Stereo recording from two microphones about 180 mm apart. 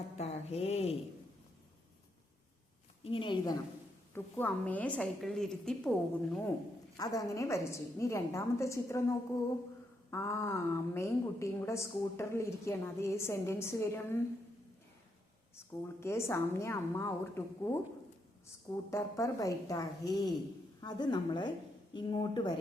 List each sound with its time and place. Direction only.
0.2 s speech: 35° left (ahead or behind)
3.0 s a woman's voice: 30° left (ahead or behind)
4.1 s a woman's voice: 10° left (ahead or behind)
6.9 s a woman's voice: 20° left (ahead or behind)
15.5 s a woman's voice: 15° left (ahead or behind)
18.9 s a woman's voice: 15° left (ahead or behind)